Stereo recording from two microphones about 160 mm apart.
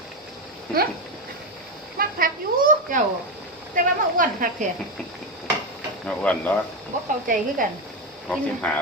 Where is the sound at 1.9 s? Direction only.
60° right (ahead or behind).